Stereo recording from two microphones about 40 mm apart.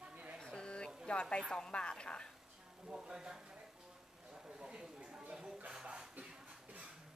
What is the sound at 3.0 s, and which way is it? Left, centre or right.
Speech, centre.